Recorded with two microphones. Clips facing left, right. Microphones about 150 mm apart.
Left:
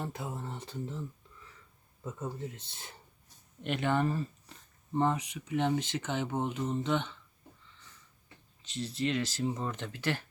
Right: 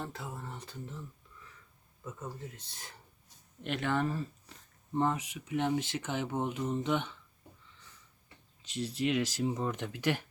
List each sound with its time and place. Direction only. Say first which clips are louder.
0.0 s speech: left 3 dB; 20° left (ahead or behind)
2.0 s speech: left 4 dB; 25° left (ahead or behind)
3.6 s speech: left 2 dB; centre (ahead or behind)
8.6 s speech: right 1 dB; 10° right (ahead or behind)